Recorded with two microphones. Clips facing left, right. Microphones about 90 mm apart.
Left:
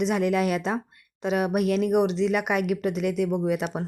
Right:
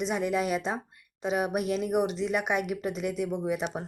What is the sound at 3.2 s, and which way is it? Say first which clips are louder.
Speech: left 6 dB; 65° left (ahead or behind).